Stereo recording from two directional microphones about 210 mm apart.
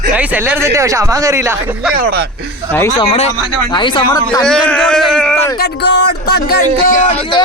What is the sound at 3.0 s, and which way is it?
Speech, 25° left (ahead or behind).